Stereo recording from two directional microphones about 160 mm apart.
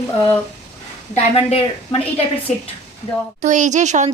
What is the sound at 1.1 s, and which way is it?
A woman's voice, 40° left (ahead or behind).